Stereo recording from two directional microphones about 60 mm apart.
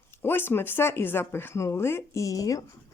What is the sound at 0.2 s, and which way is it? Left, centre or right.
Speech, left.